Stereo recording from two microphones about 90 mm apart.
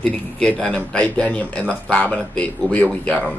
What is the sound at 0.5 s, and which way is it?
Speech, 15° left (ahead or behind).